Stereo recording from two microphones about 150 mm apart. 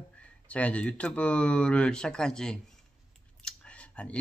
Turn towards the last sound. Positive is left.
turn(degrees=10)  # may be behind; listen again after turning